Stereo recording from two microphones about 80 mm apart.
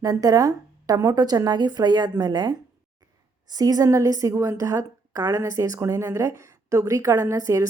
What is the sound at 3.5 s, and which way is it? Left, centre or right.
A woman's voice, right.